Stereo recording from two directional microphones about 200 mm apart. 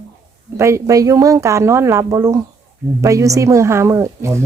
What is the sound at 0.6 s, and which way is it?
Speech, 15° right (ahead or behind).